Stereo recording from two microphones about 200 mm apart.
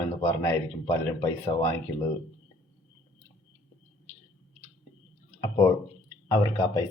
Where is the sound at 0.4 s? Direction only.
10° left (ahead or behind).